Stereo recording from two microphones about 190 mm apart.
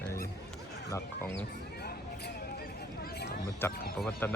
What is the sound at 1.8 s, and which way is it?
Vehicle, 55° left (ahead or behind).